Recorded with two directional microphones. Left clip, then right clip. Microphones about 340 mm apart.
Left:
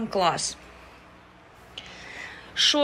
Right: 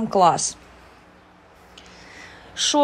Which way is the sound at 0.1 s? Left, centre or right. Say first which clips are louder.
Right 7 dB; centre.